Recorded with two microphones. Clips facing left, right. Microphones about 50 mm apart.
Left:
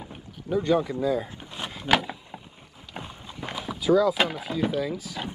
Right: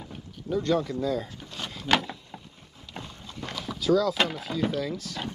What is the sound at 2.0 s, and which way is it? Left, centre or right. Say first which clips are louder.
Vehicle: left 1 dB; centre.